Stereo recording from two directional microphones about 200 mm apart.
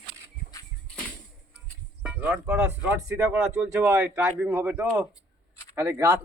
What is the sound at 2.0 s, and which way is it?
Speech, 5° right (ahead or behind).